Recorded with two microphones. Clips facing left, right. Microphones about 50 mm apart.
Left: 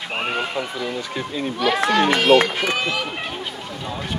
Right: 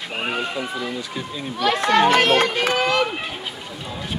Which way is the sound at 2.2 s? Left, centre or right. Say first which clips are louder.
Left 2 dB; right.